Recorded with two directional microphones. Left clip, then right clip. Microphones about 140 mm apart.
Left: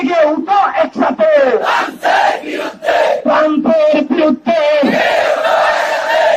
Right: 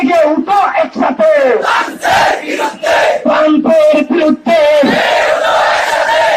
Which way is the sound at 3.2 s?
10° right (ahead or behind).